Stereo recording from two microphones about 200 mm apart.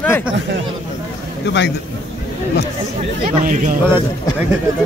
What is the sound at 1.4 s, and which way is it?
Speech, 60° left (ahead or behind).